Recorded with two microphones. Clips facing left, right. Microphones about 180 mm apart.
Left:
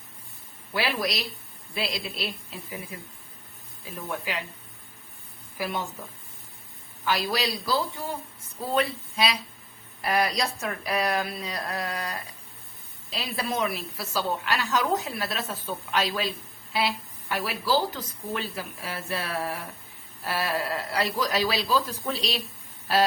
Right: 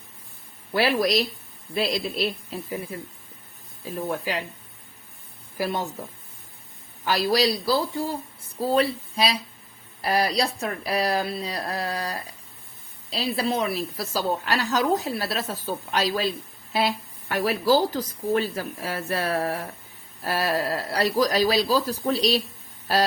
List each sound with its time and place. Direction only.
0.7 s a woman's voice: 40° right (ahead or behind)
3.9 s a woman's voice: 35° right (ahead or behind)
5.5 s a woman's voice: 35° right (ahead or behind)
7.0 s a woman's voice: 35° right (ahead or behind)